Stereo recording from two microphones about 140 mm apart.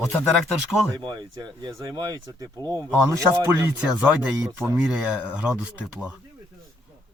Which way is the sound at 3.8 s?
10° right (ahead or behind).